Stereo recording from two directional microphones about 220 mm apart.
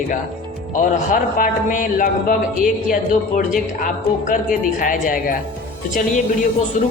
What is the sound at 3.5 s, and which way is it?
Speech, 35° left (ahead or behind).